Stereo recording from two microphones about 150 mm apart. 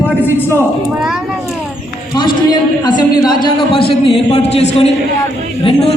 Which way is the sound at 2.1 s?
30° left (ahead or behind).